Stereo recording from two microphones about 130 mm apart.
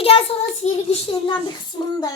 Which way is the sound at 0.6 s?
55° left (ahead or behind).